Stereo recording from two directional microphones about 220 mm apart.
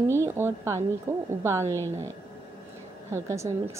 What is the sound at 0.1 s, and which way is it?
A woman's voice, 10° right (ahead or behind).